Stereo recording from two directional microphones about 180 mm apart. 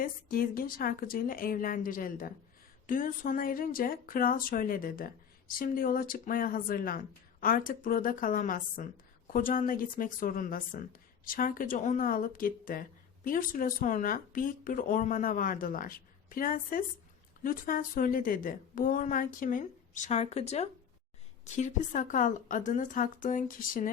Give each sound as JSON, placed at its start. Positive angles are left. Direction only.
{"t": 0.0, "sound": "a woman's voice", "side_deg": 55}